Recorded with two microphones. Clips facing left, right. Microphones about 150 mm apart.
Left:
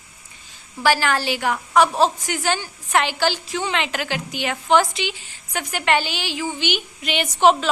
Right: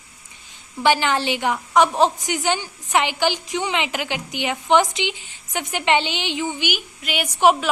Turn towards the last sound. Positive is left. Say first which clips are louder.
# left 1 dB
turn(degrees=-10)  # may be behind; listen again after turning